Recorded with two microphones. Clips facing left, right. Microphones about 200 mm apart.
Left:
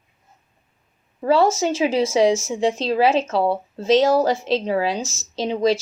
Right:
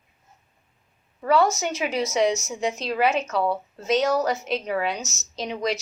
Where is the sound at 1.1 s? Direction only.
30° left (ahead or behind).